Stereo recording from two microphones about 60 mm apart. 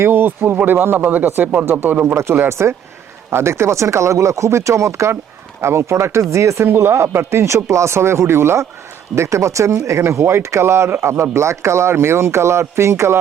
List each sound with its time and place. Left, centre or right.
0.0 s speech: right
2.1 s speech: right